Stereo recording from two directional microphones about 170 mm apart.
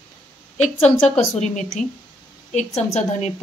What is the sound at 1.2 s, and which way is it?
Speech, 40° left (ahead or behind).